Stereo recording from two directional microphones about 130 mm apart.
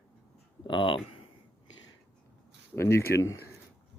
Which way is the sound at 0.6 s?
40° left (ahead or behind).